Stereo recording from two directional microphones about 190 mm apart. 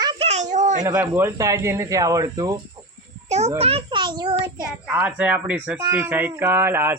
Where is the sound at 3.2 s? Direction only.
35° right (ahead or behind).